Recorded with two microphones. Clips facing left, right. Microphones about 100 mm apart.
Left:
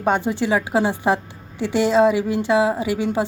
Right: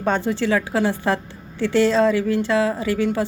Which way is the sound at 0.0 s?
15° left (ahead or behind).